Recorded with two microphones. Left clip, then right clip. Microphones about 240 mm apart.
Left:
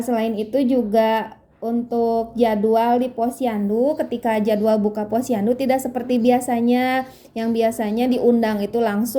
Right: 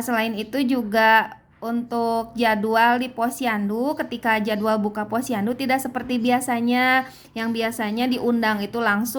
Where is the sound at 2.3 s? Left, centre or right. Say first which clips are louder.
Left 1 dB; centre.